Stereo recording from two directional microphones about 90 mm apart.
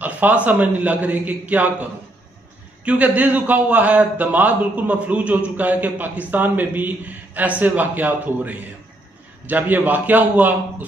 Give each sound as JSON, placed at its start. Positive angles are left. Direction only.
{"t": 0.0, "sound": "a man's voice", "side_deg": -15}